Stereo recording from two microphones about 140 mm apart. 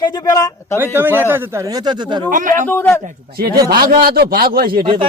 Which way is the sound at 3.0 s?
90° right.